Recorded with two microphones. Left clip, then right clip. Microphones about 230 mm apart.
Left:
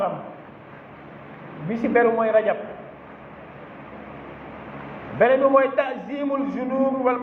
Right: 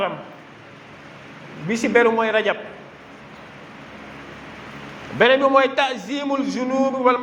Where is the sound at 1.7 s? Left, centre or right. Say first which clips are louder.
Right 2 dB; right.